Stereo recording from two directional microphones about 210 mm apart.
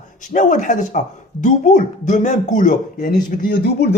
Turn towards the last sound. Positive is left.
turn(degrees=45)  # may be behind; listen again after turning